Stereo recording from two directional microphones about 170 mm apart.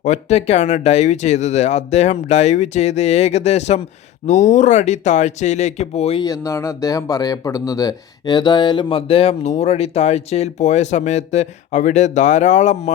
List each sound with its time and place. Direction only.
0.0 s speech: 40° left (ahead or behind)
6.2 s speech: 20° left (ahead or behind); by 12.9 s 45° left (ahead or behind)